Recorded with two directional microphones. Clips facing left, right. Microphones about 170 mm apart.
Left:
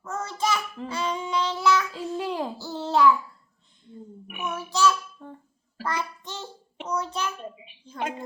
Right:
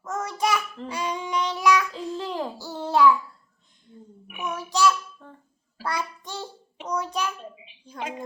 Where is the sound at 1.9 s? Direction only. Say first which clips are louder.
Left 1 dB; 10° left (ahead or behind).